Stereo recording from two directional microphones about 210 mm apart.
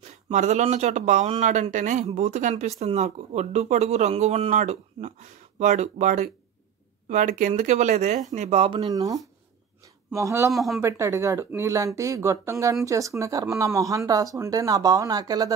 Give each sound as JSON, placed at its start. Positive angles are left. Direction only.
{"t": 0.3, "sound": "speech", "side_deg": -35}
{"t": 10.5, "sound": "speech", "side_deg": 0}
{"t": 10.8, "sound": "speech", "side_deg": -15}